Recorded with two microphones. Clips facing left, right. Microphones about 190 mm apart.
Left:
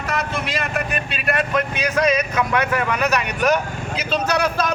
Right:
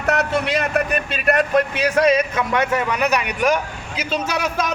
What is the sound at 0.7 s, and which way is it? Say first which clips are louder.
Speech: right 4 dB; 40° right (ahead or behind).